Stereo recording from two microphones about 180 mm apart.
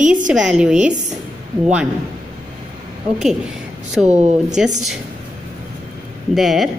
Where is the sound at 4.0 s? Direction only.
40° right (ahead or behind).